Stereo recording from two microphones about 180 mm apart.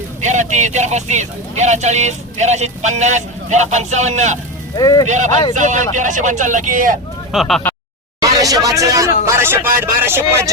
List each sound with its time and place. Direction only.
0.2 s speech: 40° right (ahead or behind)
4.7 s speech: 20° left (ahead or behind)
5.0 s speech: 45° right (ahead or behind)
7.3 s speech: centre (ahead or behind)
8.2 s speech: 20° right (ahead or behind)